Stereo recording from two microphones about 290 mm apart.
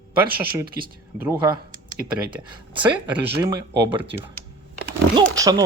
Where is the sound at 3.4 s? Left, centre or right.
Centre.